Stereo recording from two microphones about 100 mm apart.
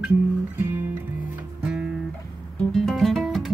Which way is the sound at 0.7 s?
25° right (ahead or behind).